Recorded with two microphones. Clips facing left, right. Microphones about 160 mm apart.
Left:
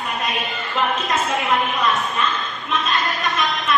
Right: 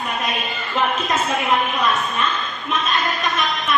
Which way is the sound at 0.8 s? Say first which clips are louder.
Right 1 dB; 20° right (ahead or behind).